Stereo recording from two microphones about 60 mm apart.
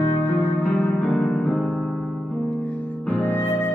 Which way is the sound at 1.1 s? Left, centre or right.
Centre.